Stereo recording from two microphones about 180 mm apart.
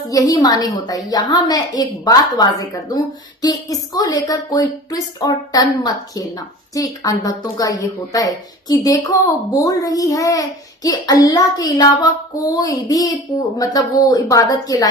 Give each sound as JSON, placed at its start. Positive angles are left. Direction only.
{"t": 0.1, "sound": "a woman's voice", "side_deg": 20}